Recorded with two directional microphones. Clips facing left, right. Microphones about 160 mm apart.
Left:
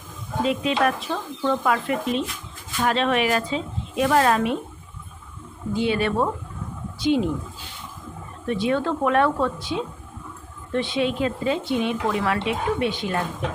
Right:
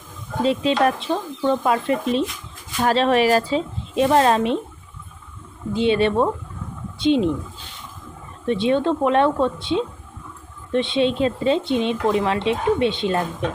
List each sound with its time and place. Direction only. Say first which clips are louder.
0.4 s speech: right 3 dB; 30° right (ahead or behind)
5.7 s speech: right 4 dB; 25° right (ahead or behind)
8.4 s speech: right 4 dB; 25° right (ahead or behind)